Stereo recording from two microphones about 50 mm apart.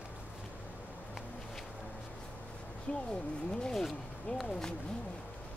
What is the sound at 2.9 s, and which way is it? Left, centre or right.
Speech, left.